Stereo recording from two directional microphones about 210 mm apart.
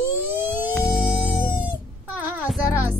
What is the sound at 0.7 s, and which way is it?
Music, centre (ahead or behind).